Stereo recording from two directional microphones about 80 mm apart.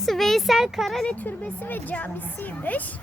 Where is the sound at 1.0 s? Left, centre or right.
Left.